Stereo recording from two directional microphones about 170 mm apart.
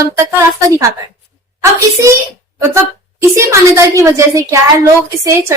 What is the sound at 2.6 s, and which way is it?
A woman's voice, 15° right (ahead or behind).